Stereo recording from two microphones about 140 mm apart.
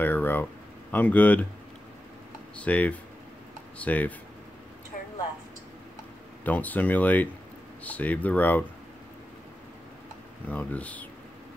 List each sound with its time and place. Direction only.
0.0 s a sound: 15° left (ahead or behind)
0.9 s speech: 10° left (ahead or behind)
2.5 s speech: 10° left (ahead or behind)
4.9 s a sound: 70° left (ahead or behind)
6.4 s speech: 10° left (ahead or behind)
10.5 s speech: 10° left (ahead or behind)